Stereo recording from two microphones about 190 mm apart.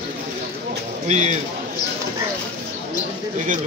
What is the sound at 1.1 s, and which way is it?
Speech, 35° right (ahead or behind).